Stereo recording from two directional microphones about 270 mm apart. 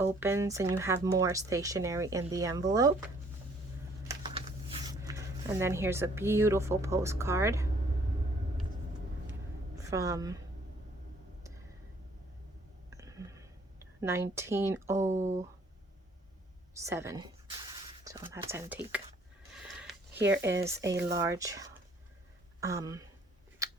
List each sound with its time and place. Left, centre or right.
0.0 s speech: centre
4.1 s speech: centre
9.7 s a woman's voice: centre
12.9 s a sound: centre
15.0 s speech: right
16.8 s speech: centre
19.6 s a sound: centre
20.1 s speech: right
21.2 s speech: centre
23.6 s a sound: centre